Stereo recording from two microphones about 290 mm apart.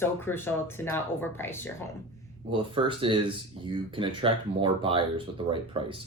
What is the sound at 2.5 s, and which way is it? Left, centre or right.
Speech, centre.